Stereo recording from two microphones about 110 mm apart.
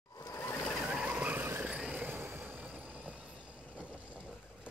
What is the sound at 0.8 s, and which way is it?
Vehicle, 10° right (ahead or behind).